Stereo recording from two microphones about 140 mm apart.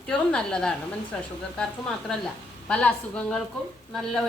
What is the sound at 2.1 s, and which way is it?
A woman's voice, 5° left (ahead or behind).